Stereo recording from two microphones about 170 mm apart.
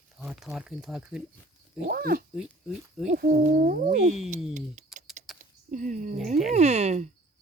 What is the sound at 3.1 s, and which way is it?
A woman's voice, 60° right (ahead or behind).